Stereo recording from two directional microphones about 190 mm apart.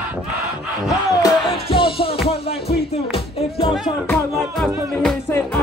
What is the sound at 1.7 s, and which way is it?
Music, 25° left (ahead or behind).